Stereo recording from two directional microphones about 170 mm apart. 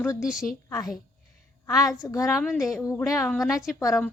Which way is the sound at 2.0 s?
20° left (ahead or behind).